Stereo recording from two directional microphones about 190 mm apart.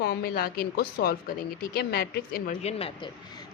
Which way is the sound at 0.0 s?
55° left (ahead or behind).